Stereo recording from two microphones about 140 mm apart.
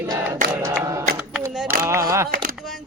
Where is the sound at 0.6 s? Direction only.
20° right (ahead or behind).